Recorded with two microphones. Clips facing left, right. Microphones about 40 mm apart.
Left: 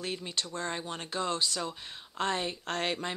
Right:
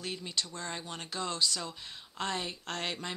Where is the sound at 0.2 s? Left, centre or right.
Left.